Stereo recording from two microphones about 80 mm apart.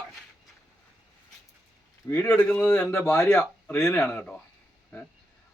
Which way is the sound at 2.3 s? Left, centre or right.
Centre.